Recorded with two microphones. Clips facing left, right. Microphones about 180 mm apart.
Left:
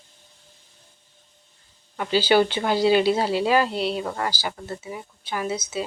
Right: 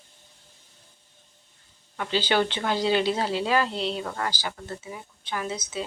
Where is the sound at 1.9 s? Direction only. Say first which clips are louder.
Left 5 dB; 10° left (ahead or behind).